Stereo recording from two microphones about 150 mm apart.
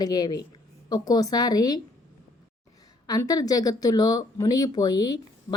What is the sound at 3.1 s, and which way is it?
Speech, 25° left (ahead or behind).